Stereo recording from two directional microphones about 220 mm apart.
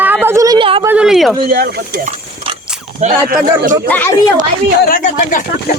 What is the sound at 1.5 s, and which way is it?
Speech, 45° right (ahead or behind).